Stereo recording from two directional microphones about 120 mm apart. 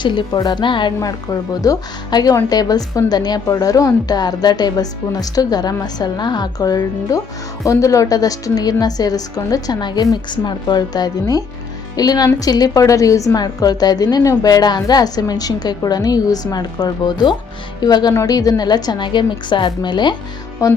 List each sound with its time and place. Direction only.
0.0 s a woman's voice: 40° left (ahead or behind)
0.3 s a woman's voice: 30° left (ahead or behind)
0.6 s a woman's voice: 40° left (ahead or behind)
0.9 s a woman's voice: 30° left (ahead or behind)
20.6 s a woman's voice: 30° left (ahead or behind)